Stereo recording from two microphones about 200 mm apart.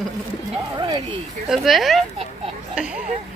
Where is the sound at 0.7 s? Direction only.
20° right (ahead or behind).